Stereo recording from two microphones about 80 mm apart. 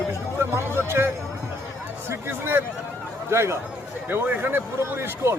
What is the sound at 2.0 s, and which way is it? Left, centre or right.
Speech, right.